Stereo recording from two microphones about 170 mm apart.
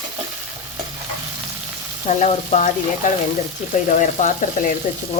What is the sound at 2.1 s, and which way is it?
Speech, 45° left (ahead or behind).